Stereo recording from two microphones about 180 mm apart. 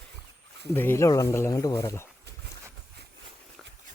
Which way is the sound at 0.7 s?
15° left (ahead or behind).